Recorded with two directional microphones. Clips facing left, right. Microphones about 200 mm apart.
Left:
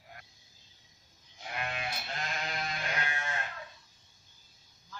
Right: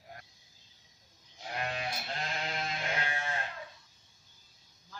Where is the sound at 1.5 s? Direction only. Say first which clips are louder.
Right 1 dB; 35° right (ahead or behind).